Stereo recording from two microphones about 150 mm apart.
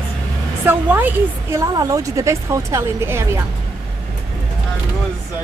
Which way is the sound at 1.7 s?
20° right (ahead or behind).